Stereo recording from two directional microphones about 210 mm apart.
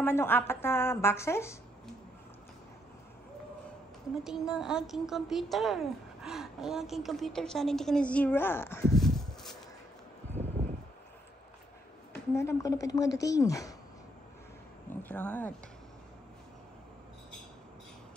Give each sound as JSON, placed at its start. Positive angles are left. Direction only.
{"t": 0.0, "sound": "a woman's voice", "side_deg": 10}
{"t": 4.2, "sound": "a woman's voice", "side_deg": -5}
{"t": 12.4, "sound": "a woman's voice", "side_deg": 15}
{"t": 14.9, "sound": "a woman's voice", "side_deg": 10}